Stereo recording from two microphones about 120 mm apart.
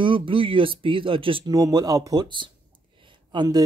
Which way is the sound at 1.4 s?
30° right (ahead or behind).